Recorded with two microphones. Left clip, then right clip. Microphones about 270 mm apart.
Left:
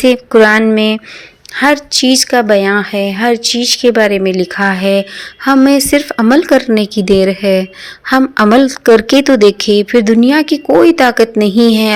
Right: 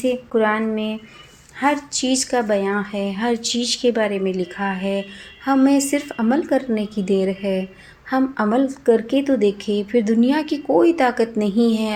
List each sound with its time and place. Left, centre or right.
0.0 s a woman's voice: left